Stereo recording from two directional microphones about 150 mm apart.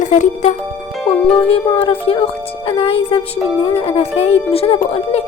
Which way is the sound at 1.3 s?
40° left (ahead or behind).